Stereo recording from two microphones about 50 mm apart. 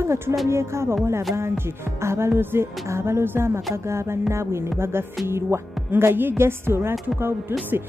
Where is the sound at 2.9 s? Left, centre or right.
Right.